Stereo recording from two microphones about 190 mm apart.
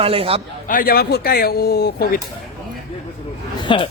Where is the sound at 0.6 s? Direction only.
50° left (ahead or behind).